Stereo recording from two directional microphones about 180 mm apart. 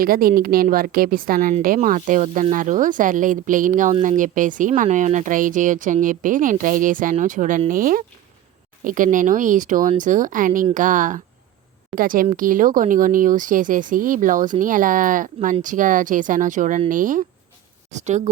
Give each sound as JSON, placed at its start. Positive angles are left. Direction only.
{"t": 0.0, "sound": "speech", "side_deg": -55}